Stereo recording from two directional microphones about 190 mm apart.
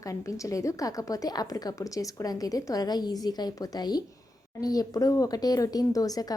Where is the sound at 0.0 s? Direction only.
15° left (ahead or behind).